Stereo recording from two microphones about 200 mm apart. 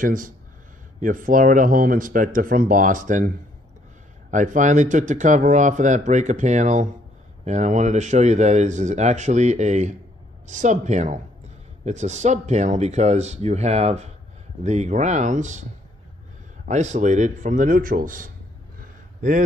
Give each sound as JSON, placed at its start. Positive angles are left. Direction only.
{"t": 0.0, "sound": "speech", "side_deg": -40}
{"t": 4.3, "sound": "speech", "side_deg": -40}
{"t": 16.6, "sound": "speech", "side_deg": -35}
{"t": 18.8, "sound": "a sound", "side_deg": -40}